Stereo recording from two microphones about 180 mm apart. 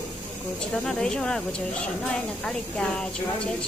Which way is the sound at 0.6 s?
5° left (ahead or behind).